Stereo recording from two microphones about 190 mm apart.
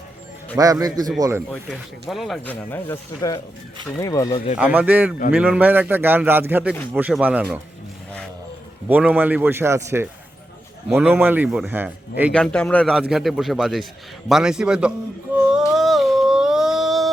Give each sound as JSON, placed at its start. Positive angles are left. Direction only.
{"t": 0.5, "sound": "a man's voice", "side_deg": -20}
{"t": 1.5, "sound": "speech", "side_deg": 0}
{"t": 3.2, "sound": "speech", "side_deg": 20}
{"t": 4.5, "sound": "speech", "side_deg": -10}
{"t": 8.9, "sound": "speech", "side_deg": -10}
{"t": 12.3, "sound": "speech", "side_deg": 5}
{"t": 15.4, "sound": "a sound", "side_deg": -5}